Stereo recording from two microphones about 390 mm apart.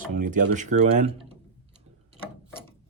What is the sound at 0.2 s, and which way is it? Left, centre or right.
Speech, centre.